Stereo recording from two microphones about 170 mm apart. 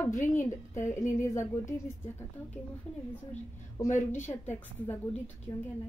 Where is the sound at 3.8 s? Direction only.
15° left (ahead or behind).